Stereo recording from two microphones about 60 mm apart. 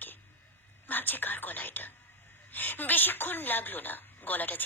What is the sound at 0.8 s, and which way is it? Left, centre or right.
A woman's voice, left.